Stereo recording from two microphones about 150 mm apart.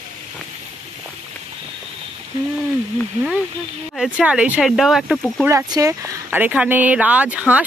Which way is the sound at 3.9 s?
5° right (ahead or behind).